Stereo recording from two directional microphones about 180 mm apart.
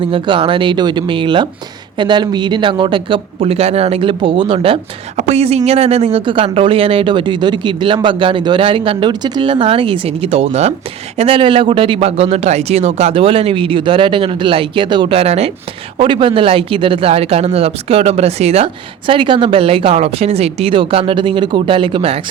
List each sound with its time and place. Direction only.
0.0 s speech: 30° right (ahead or behind)